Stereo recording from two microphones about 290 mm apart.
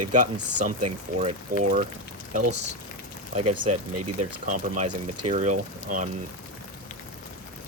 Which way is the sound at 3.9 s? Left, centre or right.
Right.